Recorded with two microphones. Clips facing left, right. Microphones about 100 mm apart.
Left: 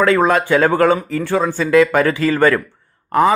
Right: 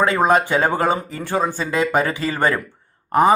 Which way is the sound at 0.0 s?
20° right (ahead or behind).